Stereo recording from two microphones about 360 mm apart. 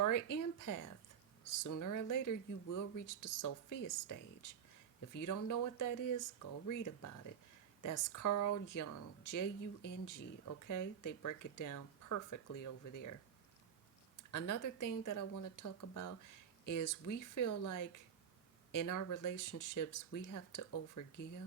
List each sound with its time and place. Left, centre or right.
0.3 s speech: left
14.2 s speech: left